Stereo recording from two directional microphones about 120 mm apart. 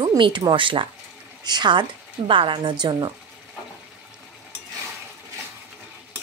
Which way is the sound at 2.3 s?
45° right (ahead or behind).